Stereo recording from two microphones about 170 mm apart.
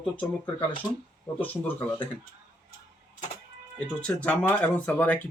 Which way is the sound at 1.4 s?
10° left (ahead or behind).